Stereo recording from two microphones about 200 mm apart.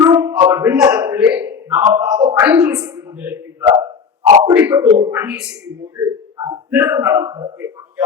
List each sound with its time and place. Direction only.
0.0 s a sound: 15° right (ahead or behind)
1.9 s a man's voice: 5° right (ahead or behind)
6.0 s a man's voice: 20° right (ahead or behind)